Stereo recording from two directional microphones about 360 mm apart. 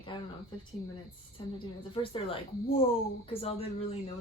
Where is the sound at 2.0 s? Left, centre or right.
Centre.